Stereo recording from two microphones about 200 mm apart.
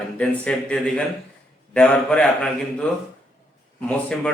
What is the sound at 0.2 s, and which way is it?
A man's voice, 5° left (ahead or behind).